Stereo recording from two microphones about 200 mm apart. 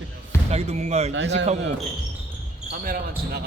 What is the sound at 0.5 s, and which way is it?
Speech, 35° right (ahead or behind).